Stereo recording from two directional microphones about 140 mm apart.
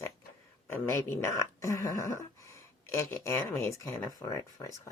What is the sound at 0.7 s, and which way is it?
Speech, 15° left (ahead or behind).